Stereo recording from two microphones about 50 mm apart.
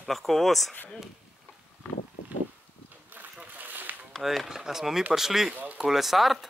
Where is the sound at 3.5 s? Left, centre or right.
Right.